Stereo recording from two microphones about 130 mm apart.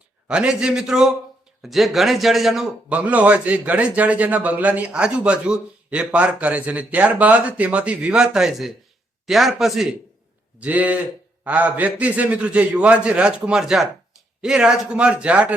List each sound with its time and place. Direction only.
0.3 s a man's voice: 5° right (ahead or behind)